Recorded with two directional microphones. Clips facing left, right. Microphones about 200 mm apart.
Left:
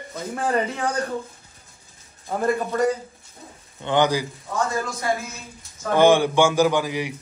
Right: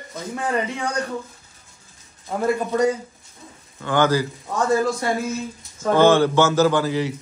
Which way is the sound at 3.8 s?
20° left (ahead or behind).